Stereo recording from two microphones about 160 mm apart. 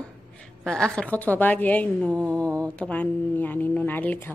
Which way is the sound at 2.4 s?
20° right (ahead or behind).